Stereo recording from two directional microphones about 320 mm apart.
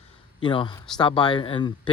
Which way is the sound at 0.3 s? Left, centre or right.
Centre.